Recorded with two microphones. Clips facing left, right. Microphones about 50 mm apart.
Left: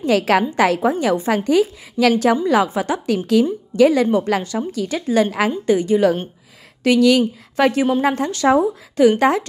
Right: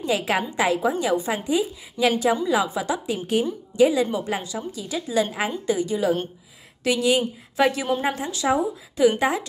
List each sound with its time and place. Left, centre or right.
0.0 s a woman's voice: left
1.4 s a woman's voice: left
3.7 s a woman's voice: left